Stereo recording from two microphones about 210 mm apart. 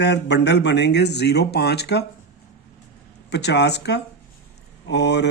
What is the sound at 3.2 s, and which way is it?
Speech, 55° left (ahead or behind).